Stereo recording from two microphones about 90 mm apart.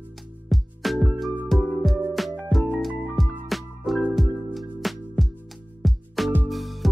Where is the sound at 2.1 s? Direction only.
Centre (ahead or behind).